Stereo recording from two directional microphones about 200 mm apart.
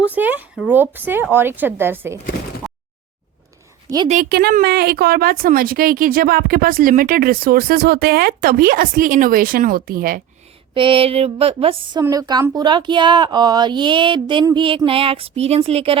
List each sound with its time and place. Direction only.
0.1 s speech: 10° right (ahead or behind)
3.8 s a woman's voice: 20° right (ahead or behind)
4.1 s a woman's voice: 45° right (ahead or behind)
10.8 s speech: 25° right (ahead or behind)